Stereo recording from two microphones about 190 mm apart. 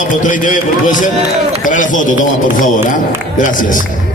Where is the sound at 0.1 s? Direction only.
45° left (ahead or behind).